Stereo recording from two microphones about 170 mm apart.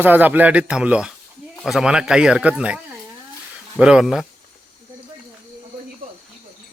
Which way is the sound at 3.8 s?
5° right (ahead or behind).